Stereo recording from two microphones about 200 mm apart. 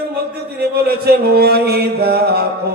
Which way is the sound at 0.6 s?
50° right (ahead or behind).